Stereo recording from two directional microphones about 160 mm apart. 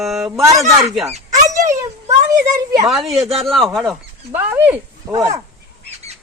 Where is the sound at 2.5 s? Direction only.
20° right (ahead or behind).